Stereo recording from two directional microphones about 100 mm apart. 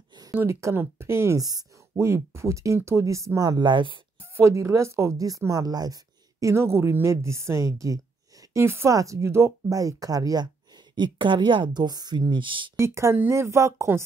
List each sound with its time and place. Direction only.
0.5 s a woman's voice: 30° right (ahead or behind)
1.4 s speech: 40° right (ahead or behind)
2.0 s speech: 30° right (ahead or behind); by 4.0 s 55° right (ahead or behind)
4.4 s a woman's voice: 30° right (ahead or behind)
6.4 s a woman's voice: 25° right (ahead or behind)
11.0 s a woman's voice: 50° right (ahead or behind)
12.7 s a woman's voice: 25° right (ahead or behind)